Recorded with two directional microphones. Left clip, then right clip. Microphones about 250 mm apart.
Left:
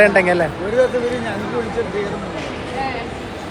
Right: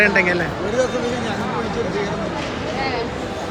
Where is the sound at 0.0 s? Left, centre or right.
Centre.